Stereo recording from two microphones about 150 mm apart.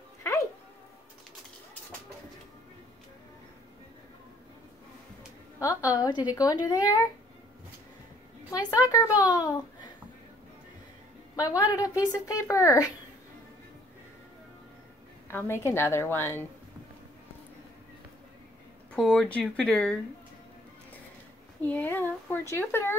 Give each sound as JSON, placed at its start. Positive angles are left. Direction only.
{"t": 5.6, "sound": "speech", "side_deg": 20}
{"t": 8.5, "sound": "speech", "side_deg": 25}
{"t": 11.3, "sound": "speech", "side_deg": 25}
{"t": 15.2, "sound": "speech", "side_deg": 15}
{"t": 18.9, "sound": "speech", "side_deg": 5}
{"t": 21.6, "sound": "speech", "side_deg": 15}